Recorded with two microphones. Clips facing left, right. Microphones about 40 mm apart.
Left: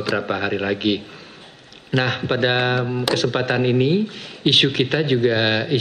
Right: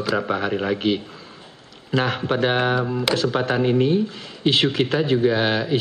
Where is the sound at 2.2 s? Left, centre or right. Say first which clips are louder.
Left 1 dB; left.